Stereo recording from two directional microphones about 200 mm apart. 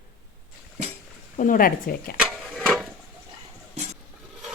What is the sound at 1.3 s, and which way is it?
Speech, 40° left (ahead or behind).